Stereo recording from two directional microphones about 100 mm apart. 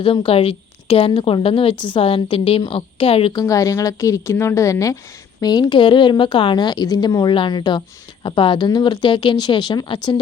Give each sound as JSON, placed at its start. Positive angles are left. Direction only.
{"t": 0.0, "sound": "a woman's voice", "side_deg": 65}
{"t": 3.4, "sound": "a woman's voice", "side_deg": 35}
{"t": 5.4, "sound": "a woman's voice", "side_deg": 40}